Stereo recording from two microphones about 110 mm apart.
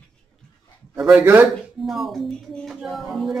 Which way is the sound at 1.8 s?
Centre (ahead or behind).